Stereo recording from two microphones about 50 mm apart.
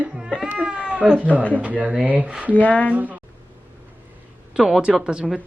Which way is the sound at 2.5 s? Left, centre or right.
Left.